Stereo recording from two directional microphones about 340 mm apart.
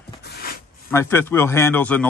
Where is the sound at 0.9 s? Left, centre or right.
Centre.